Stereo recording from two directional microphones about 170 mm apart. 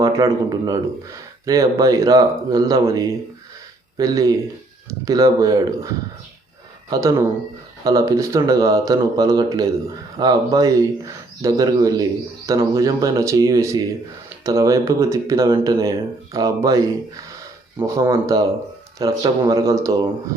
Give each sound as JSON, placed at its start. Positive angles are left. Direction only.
{"t": 0.0, "sound": "speech", "side_deg": -20}
{"t": 6.9, "sound": "speech", "side_deg": -20}